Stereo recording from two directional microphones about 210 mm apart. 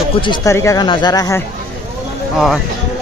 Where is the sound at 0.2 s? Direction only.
20° left (ahead or behind).